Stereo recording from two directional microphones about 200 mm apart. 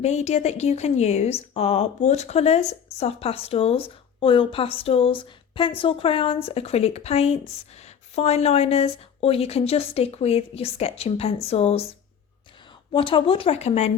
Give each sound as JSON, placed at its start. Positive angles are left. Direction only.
{"t": 0.0, "sound": "a woman's voice", "side_deg": 35}